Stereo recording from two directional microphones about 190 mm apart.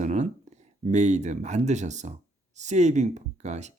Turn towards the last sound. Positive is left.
turn(degrees=-35)  # may be behind; listen again after turning